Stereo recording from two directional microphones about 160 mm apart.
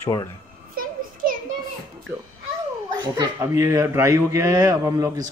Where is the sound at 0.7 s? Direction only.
60° right (ahead or behind).